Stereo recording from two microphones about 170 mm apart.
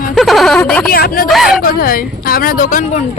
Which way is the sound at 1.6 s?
60° left (ahead or behind).